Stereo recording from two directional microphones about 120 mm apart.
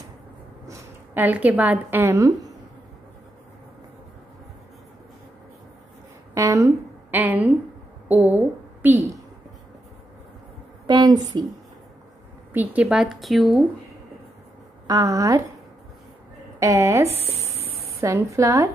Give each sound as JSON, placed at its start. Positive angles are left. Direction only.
{"t": 0.7, "sound": "a woman's voice", "side_deg": -15}
{"t": 6.3, "sound": "a sound", "side_deg": -25}
{"t": 7.1, "sound": "a woman's voice", "side_deg": -15}
{"t": 10.9, "sound": "a woman's voice", "side_deg": -35}
{"t": 12.5, "sound": "speech", "side_deg": -10}
{"t": 14.9, "sound": "a woman's voice", "side_deg": -30}
{"t": 16.5, "sound": "a woman's voice", "side_deg": -25}